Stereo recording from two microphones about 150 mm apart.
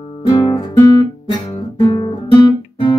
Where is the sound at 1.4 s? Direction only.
40° left (ahead or behind).